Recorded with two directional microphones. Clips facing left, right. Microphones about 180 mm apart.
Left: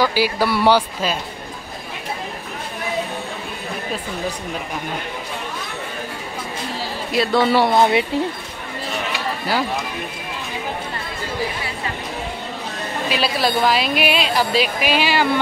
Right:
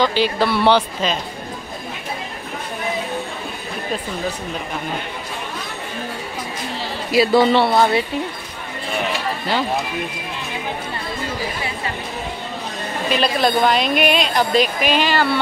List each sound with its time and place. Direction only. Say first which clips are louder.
0.0 s speech: right 1 dB; 10° left (ahead or behind)
7.1 s a woman's voice: right 4 dB; centre (ahead or behind)
7.5 s speech: even; 20° left (ahead or behind)
13.1 s a woman's voice: right 3 dB; 5° left (ahead or behind)